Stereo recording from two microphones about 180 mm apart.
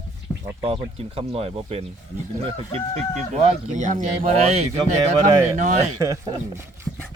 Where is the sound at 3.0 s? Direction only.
35° right (ahead or behind).